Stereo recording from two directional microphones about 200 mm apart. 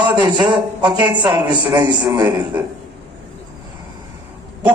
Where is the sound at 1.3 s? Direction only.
20° right (ahead or behind).